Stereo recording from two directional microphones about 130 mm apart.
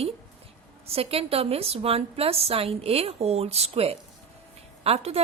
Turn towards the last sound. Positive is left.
turn(degrees=-50)  # may be behind; listen again after turning